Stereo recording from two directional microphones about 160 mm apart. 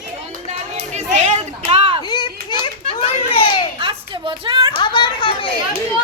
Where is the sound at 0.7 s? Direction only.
45° right (ahead or behind).